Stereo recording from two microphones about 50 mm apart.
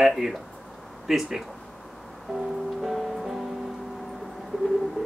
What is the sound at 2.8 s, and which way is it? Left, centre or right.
Music, centre.